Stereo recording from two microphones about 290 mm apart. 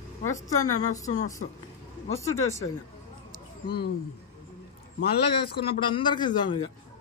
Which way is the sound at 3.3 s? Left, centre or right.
Left.